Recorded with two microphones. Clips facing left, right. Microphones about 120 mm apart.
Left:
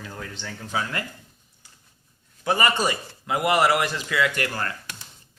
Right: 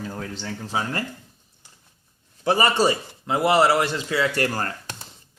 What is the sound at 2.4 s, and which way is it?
Speech, 30° right (ahead or behind).